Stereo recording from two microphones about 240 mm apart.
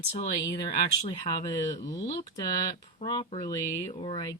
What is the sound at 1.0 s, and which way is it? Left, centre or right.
Speech, centre.